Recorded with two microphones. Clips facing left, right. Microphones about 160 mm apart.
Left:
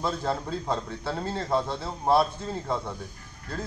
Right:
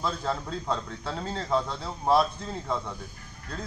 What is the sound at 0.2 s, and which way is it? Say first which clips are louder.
A man's voice: left 2 dB; 5° left (ahead or behind).